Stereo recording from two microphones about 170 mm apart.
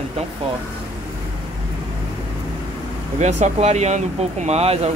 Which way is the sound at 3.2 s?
40° right (ahead or behind).